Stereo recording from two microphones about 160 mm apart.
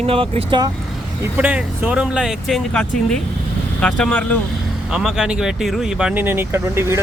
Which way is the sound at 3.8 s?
5° left (ahead or behind).